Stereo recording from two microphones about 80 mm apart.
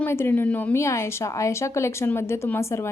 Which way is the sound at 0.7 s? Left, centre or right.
Left.